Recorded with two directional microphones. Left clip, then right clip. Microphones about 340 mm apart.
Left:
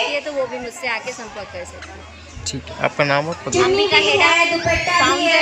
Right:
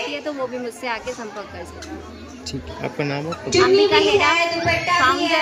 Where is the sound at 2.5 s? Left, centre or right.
Centre.